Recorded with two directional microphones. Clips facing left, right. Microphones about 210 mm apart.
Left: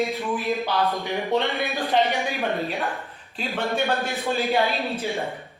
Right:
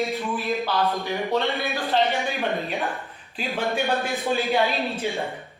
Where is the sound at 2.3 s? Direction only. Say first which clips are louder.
Even; centre (ahead or behind).